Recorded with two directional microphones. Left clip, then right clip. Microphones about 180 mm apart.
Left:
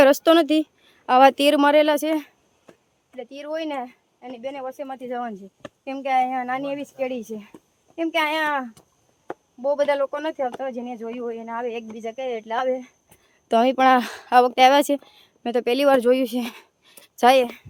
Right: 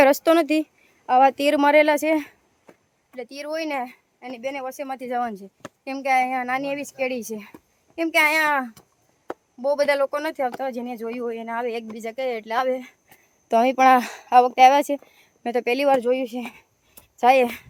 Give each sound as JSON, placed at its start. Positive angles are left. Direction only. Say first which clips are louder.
{"t": 0.0, "sound": "speech", "louder": "left 1 dB", "side_deg": 10}
{"t": 1.0, "sound": "speech", "louder": "left 2 dB", "side_deg": 20}
{"t": 1.5, "sound": "speech", "louder": "even", "side_deg": 5}
{"t": 3.1, "sound": "speech", "louder": "even", "side_deg": -15}
{"t": 13.5, "sound": "speech", "louder": "right 1 dB", "side_deg": 10}